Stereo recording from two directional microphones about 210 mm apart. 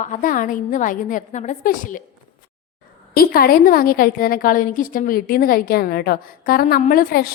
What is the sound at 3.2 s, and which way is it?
A woman's voice, 45° left (ahead or behind).